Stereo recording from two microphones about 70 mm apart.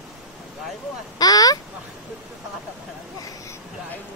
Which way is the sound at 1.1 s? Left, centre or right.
Left.